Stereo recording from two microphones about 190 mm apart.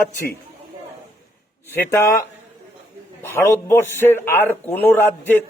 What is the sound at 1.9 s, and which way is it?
A man's voice, 15° left (ahead or behind).